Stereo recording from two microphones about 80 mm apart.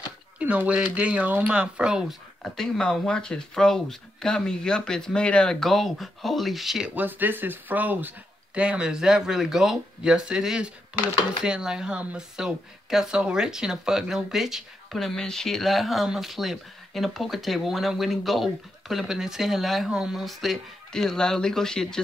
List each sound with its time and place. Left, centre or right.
0.4 s speech: centre
2.4 s speech: centre
7.0 s speech: right; by 22.0 s centre